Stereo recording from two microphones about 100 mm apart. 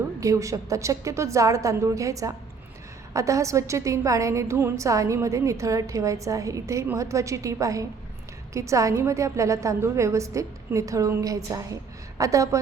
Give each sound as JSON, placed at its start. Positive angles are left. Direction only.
{"t": 0.2, "sound": "a woman's voice", "side_deg": -35}